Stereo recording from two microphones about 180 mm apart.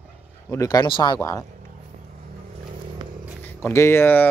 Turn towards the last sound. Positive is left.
turn(degrees=10)  # may be behind; listen again after turning